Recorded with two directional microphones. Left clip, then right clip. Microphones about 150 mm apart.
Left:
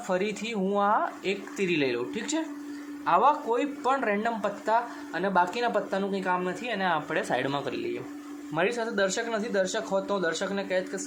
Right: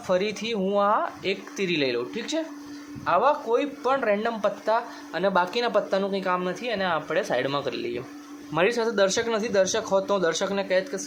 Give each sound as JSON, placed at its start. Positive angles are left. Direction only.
{"t": 0.1, "sound": "speech", "side_deg": -10}
{"t": 8.5, "sound": "speech", "side_deg": -25}